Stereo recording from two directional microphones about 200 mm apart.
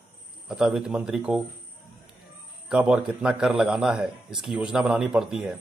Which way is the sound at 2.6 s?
5° right (ahead or behind).